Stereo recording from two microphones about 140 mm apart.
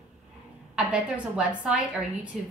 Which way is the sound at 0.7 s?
10° right (ahead or behind).